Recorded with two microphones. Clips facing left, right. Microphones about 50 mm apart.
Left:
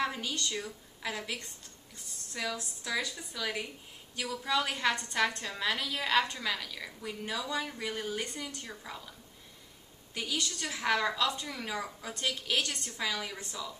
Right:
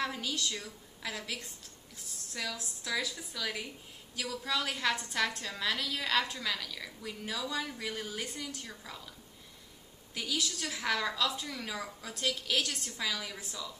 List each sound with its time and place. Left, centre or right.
0.0 s a woman's voice: centre
10.1 s a woman's voice: centre